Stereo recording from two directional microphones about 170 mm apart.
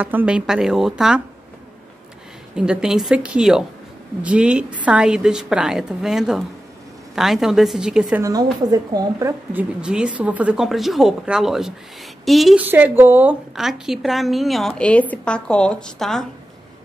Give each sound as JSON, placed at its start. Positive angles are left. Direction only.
{"t": 0.0, "sound": "a woman's voice", "side_deg": -10}
{"t": 2.5, "sound": "a woman's voice", "side_deg": -5}
{"t": 8.2, "sound": "speech", "side_deg": -20}
{"t": 9.5, "sound": "a woman's voice", "side_deg": -10}
{"t": 12.6, "sound": "a woman's voice", "side_deg": -10}